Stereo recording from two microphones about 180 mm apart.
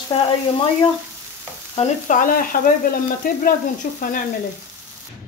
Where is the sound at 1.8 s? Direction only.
45° left (ahead or behind).